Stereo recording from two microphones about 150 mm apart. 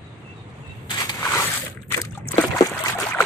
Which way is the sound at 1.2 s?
20° left (ahead or behind).